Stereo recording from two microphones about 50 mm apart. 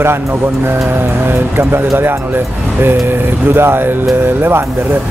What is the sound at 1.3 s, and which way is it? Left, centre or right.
Speech, right.